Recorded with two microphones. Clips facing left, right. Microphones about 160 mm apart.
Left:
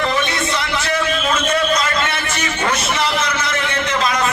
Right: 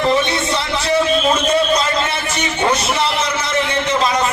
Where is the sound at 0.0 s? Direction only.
30° right (ahead or behind).